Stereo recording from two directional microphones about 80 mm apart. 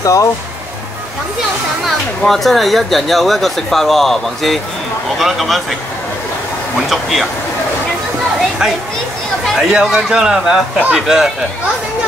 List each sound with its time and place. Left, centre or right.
0.0 s speech: left
1.9 s speech: centre
6.9 s speech: centre
8.4 s a sound: centre
9.6 s a man's voice: centre